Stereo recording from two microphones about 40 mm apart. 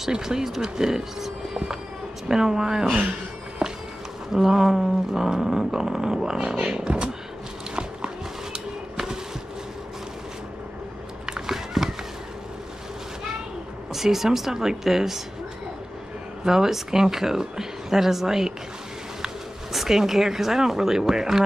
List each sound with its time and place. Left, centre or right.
0.1 s speech: centre
3.6 s walk: centre
4.3 s speech: centre
6.9 s speech: right
8.9 s a sound: centre
11.2 s biting: centre
13.9 s speech: centre
16.4 s speech: centre